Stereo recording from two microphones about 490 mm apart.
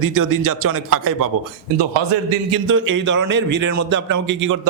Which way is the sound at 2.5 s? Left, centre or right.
Right.